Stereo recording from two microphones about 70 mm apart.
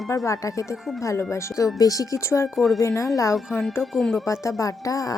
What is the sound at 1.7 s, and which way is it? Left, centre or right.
Speech, left.